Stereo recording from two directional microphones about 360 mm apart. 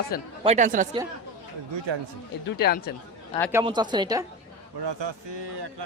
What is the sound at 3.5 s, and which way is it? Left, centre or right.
Speech, centre.